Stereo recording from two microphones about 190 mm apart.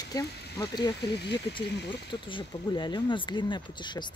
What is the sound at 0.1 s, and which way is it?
Speech, 20° left (ahead or behind).